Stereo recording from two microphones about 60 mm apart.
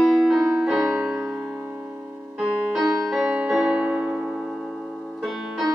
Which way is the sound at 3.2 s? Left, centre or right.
Centre.